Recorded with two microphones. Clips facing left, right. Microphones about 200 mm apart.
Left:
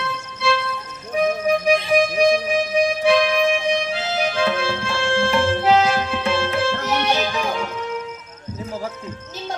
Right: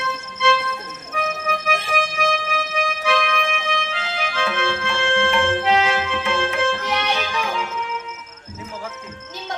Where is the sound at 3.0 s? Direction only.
35° left (ahead or behind).